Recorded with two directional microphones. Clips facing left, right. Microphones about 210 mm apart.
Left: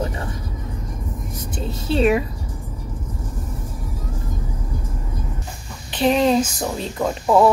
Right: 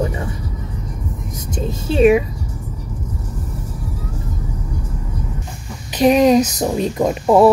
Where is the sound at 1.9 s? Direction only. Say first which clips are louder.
Right 5 dB; 10° right (ahead or behind).